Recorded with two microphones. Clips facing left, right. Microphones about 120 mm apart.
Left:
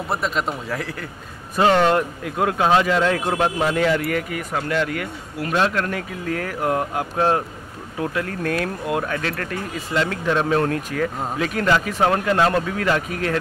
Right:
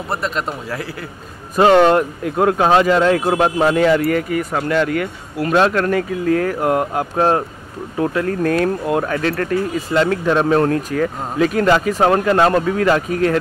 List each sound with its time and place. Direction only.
0.1 s a man's voice: centre (ahead or behind)
1.6 s speech: 25° right (ahead or behind)
5.5 s speech: 50° right (ahead or behind)